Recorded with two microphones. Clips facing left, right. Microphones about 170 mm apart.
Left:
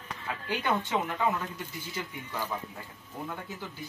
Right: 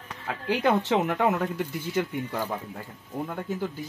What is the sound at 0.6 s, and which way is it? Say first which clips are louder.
Speech: right 7 dB; 85° right.